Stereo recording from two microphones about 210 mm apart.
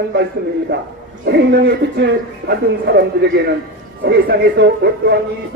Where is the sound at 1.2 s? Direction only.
55° right (ahead or behind).